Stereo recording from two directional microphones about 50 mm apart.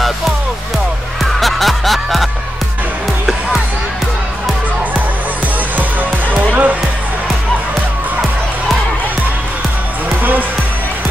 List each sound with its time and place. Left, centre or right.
1.2 s music: centre
6.5 s music: right